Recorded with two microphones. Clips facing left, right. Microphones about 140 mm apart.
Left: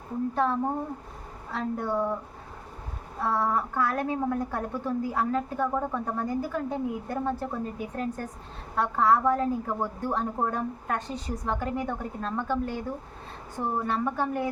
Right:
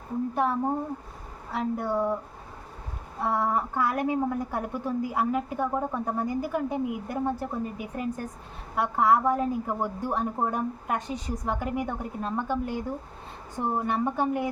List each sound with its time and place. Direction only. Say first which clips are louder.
0.4 s a woman's voice: even; 10° right (ahead or behind)
3.2 s a woman's voice: even; 15° right (ahead or behind)